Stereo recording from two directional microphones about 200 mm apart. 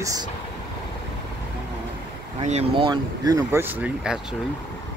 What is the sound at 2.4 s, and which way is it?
Speech, 30° right (ahead or behind).